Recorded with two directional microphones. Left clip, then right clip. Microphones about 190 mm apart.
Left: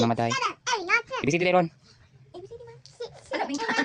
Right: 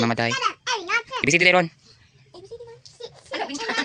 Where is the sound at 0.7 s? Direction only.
15° left (ahead or behind).